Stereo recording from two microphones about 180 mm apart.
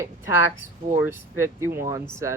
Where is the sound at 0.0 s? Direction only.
15° right (ahead or behind).